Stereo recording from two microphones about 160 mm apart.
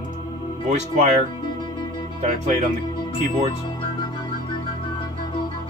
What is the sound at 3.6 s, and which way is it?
Music, 30° left (ahead or behind).